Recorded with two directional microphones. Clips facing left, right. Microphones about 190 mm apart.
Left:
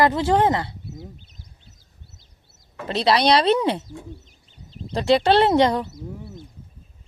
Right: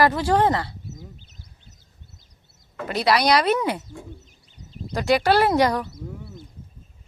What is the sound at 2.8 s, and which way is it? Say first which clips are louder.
Speech: left 1 dB; 25° left (ahead or behind).